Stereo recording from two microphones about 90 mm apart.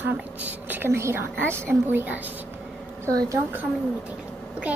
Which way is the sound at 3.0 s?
40° right (ahead or behind).